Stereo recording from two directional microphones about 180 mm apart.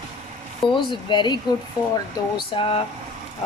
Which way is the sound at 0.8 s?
25° left (ahead or behind).